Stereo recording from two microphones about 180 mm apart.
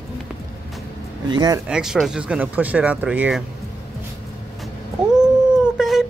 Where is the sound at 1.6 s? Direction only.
5° right (ahead or behind).